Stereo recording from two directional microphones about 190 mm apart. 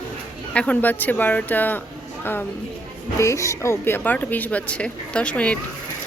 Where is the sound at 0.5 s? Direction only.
5° left (ahead or behind).